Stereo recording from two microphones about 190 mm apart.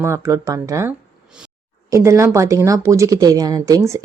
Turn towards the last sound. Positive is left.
turn(degrees=-15)  # may be behind; listen again after turning